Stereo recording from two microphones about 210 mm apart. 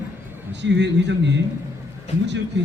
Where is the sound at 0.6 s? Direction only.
55° right (ahead or behind).